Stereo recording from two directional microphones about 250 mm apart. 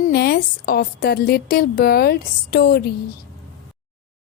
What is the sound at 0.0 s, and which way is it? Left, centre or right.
A woman's voice, left.